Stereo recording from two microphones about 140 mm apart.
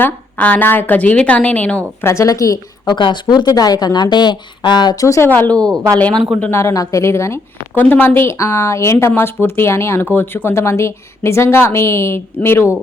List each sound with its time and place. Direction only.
0.0 s a woman's voice: 10° left (ahead or behind)